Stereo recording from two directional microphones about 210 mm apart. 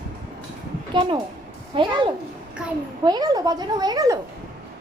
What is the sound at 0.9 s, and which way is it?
A woman's voice, 20° right (ahead or behind).